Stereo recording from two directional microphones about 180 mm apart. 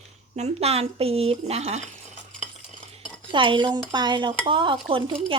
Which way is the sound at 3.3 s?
25° right (ahead or behind).